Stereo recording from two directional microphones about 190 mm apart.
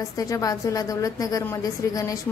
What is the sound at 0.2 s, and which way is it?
A woman's voice, 20° left (ahead or behind).